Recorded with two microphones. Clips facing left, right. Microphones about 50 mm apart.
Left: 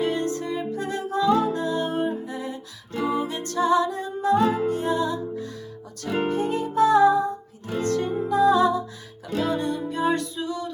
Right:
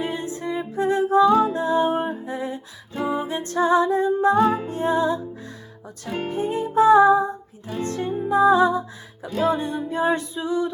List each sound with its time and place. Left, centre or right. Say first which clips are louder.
0.0 s music: left 2 dB; centre